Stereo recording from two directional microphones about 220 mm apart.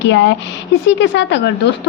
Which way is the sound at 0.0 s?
55° left (ahead or behind).